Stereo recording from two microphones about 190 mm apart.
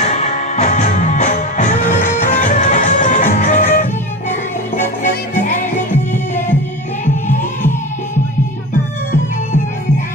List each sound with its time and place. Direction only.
0.1 s music: 35° left (ahead or behind)